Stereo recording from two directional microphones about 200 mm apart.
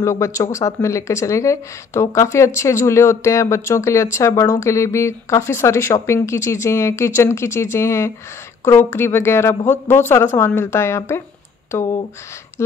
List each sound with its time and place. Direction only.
0.0 s speech: 15° left (ahead or behind)
12.6 s speech: 15° left (ahead or behind)